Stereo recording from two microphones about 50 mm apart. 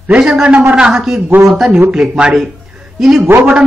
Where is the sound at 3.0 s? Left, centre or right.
Centre.